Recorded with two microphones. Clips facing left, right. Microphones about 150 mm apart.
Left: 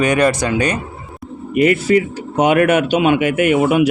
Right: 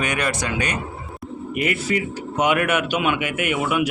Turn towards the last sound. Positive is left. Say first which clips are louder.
# left 9 dB
turn(degrees=30)  # may be behind; listen again after turning